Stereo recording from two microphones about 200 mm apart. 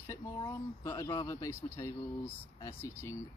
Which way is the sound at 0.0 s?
15° left (ahead or behind).